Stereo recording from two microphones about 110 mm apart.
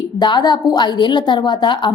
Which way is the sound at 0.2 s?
40° left (ahead or behind).